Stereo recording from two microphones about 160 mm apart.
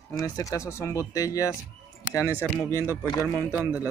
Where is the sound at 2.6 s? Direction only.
15° left (ahead or behind).